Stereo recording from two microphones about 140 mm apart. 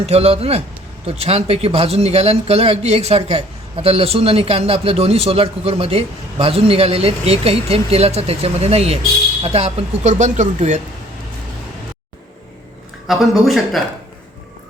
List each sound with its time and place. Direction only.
0.0 s a man's voice: 45° right (ahead or behind)
13.1 s speech: centre (ahead or behind)